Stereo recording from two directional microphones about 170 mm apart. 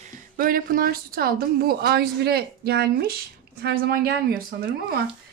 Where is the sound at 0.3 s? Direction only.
60° right (ahead or behind).